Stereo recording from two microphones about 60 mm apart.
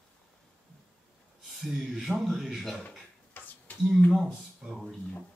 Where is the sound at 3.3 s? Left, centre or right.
Left.